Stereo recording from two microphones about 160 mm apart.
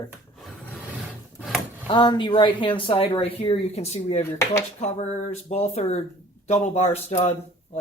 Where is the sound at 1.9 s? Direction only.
30° left (ahead or behind).